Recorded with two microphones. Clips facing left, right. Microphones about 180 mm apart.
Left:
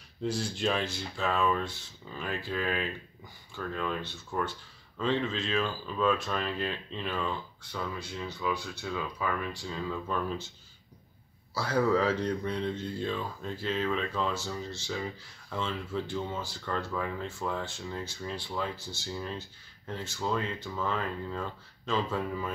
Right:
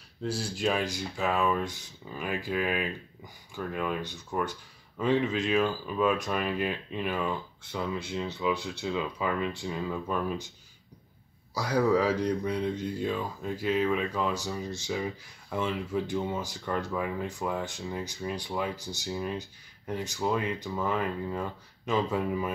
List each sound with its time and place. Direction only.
0.2 s speech: 5° right (ahead or behind)
11.5 s speech: 15° right (ahead or behind)